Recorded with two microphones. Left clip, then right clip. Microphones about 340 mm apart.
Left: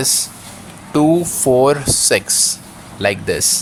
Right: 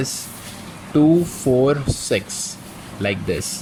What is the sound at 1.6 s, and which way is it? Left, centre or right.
Speech, centre.